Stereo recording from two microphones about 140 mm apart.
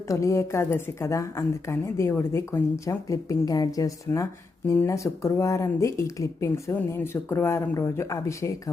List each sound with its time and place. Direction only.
0.1 s a woman's voice: 20° left (ahead or behind)